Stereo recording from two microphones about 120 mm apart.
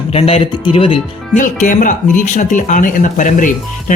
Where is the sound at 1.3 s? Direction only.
90° left.